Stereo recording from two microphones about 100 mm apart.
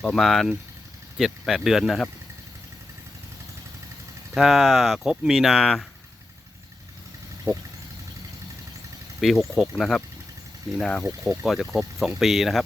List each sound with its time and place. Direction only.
0.0 s speech: centre (ahead or behind)
4.4 s speech: centre (ahead or behind)
9.2 s speech: centre (ahead or behind)
11.3 s speech: centre (ahead or behind)